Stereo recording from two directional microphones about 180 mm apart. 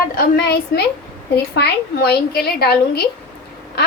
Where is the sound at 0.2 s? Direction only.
60° left (ahead or behind).